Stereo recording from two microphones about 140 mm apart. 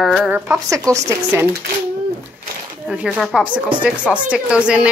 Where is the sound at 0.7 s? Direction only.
20° right (ahead or behind).